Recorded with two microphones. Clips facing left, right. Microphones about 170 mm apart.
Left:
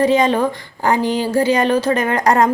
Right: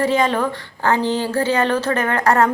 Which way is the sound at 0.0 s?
15° left (ahead or behind).